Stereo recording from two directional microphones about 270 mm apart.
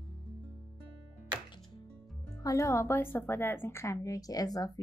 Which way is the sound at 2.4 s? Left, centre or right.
Centre.